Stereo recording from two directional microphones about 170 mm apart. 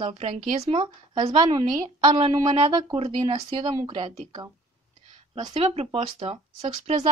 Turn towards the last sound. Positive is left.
turn(degrees=-40)  # may be behind; listen again after turning